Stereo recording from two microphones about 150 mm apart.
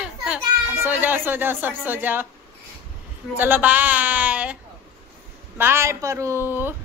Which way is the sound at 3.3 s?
10° right (ahead or behind).